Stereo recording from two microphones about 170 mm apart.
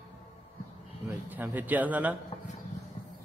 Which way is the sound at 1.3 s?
10° right (ahead or behind).